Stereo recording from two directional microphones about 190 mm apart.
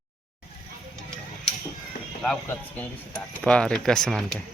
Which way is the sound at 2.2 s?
5° left (ahead or behind).